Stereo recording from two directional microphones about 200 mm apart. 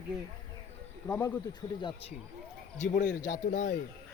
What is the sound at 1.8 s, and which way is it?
Speech, 25° left (ahead or behind).